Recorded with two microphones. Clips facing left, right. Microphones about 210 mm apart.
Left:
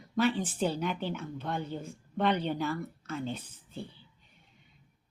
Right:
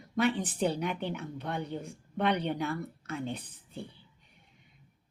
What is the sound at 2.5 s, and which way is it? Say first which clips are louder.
Speech: even; 60° right (ahead or behind).